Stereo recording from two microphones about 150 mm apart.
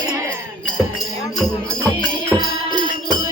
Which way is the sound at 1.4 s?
10° left (ahead or behind).